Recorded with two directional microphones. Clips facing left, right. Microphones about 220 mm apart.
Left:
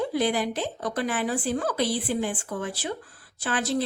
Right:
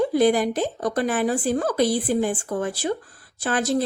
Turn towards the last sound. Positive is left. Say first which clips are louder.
# right 4 dB
turn(degrees=-45)  # may be behind; listen again after turning